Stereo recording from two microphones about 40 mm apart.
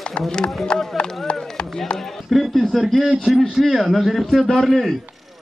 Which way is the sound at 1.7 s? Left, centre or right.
Centre.